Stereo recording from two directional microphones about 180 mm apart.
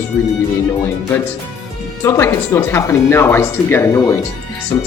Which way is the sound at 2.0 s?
15° left (ahead or behind).